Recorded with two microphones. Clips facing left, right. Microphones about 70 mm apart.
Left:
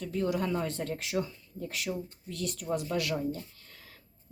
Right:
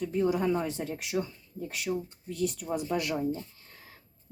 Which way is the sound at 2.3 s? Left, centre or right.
Left.